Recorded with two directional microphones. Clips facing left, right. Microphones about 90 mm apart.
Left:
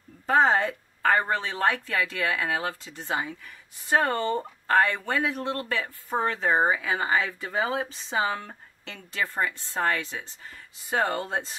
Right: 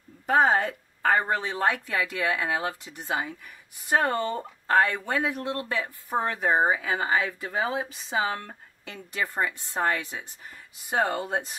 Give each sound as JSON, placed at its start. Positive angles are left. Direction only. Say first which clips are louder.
{"t": 0.3, "sound": "speech", "louder": "even", "side_deg": -10}
{"t": 6.5, "sound": "speech", "louder": "right 1 dB", "side_deg": -5}